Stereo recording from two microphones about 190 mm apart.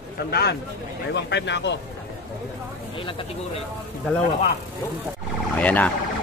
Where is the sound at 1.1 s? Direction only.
65° left (ahead or behind).